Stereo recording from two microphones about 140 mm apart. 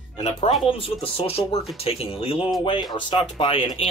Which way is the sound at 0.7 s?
40° left (ahead or behind).